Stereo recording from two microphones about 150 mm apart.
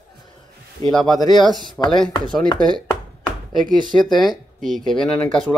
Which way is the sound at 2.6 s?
30° right (ahead or behind).